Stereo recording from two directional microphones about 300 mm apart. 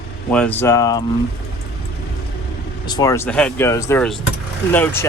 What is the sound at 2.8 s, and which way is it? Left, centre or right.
Speech, centre.